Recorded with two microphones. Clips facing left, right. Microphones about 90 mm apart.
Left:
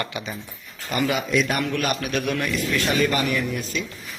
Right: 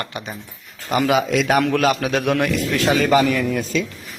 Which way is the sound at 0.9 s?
90° right.